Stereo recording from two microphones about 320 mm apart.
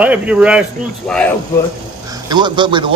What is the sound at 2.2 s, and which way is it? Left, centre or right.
Speech, centre.